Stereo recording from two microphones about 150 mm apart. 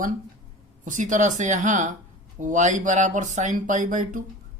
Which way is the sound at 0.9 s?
55° right (ahead or behind).